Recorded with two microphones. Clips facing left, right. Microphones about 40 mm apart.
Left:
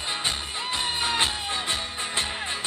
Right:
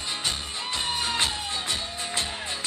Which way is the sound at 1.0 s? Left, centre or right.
Left.